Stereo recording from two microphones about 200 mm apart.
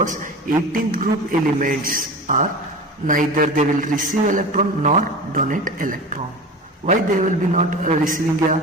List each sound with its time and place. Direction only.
0.0 s a man's voice: 40° right (ahead or behind)